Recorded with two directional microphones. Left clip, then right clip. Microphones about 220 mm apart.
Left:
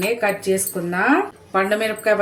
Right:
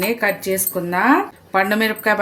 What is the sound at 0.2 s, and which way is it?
Speech, 50° right (ahead or behind).